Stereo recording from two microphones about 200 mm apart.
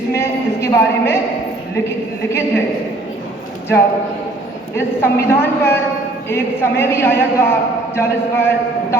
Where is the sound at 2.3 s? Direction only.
10° left (ahead or behind).